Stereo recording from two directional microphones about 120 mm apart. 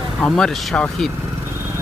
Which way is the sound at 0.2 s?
5° left (ahead or behind).